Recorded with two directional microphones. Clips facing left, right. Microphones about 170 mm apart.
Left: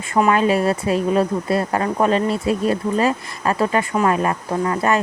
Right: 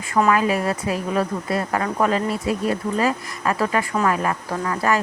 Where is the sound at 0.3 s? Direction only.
25° left (ahead or behind).